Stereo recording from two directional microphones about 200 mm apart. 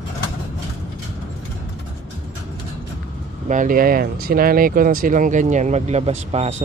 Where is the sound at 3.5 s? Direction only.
40° right (ahead or behind).